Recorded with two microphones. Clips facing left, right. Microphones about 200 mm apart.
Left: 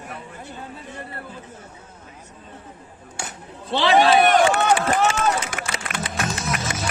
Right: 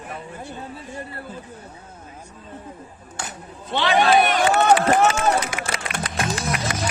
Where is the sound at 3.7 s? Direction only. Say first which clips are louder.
Left 2 dB; 30° left (ahead or behind).